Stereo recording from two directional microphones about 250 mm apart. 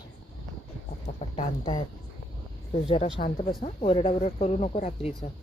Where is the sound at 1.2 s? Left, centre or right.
Left.